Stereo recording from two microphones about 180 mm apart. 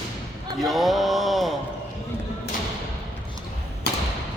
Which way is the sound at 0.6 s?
Centre (ahead or behind).